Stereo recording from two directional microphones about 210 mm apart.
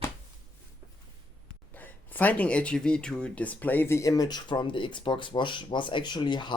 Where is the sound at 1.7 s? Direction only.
10° left (ahead or behind).